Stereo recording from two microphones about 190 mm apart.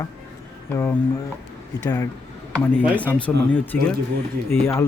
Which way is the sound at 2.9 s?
5° left (ahead or behind).